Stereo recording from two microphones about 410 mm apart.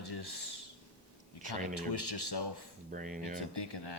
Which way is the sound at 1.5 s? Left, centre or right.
Left.